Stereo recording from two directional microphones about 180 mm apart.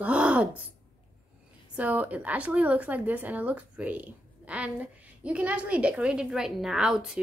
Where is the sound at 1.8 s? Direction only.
10° right (ahead or behind).